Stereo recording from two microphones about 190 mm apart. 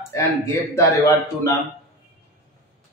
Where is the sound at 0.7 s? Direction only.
15° left (ahead or behind).